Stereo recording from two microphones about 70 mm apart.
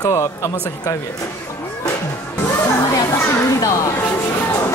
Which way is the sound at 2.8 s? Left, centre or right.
Left.